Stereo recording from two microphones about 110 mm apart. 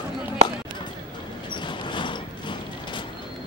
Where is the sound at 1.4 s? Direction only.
45° left (ahead or behind).